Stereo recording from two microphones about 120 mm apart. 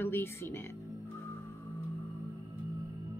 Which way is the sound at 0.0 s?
20° left (ahead or behind).